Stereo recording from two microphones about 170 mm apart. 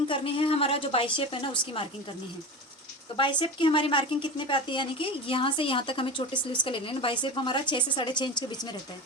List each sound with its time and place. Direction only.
0.1 s a woman's voice: 35° left (ahead or behind)
3.2 s speech: 30° left (ahead or behind)